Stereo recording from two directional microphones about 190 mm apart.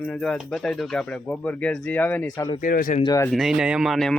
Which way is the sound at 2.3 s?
20° left (ahead or behind).